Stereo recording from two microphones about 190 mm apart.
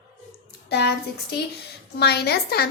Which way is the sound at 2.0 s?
60° left (ahead or behind).